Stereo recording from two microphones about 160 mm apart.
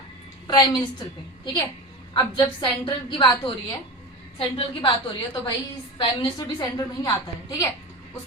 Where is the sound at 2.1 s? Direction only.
30° left (ahead or behind).